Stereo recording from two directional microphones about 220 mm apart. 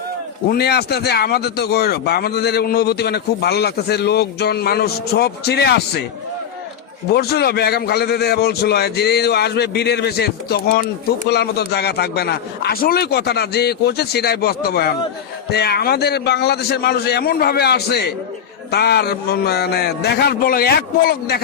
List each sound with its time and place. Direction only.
0.5 s speech: 45° left (ahead or behind)
7.1 s speech: 45° left (ahead or behind)